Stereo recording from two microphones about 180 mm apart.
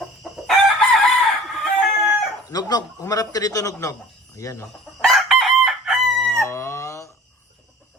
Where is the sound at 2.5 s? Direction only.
20° left (ahead or behind).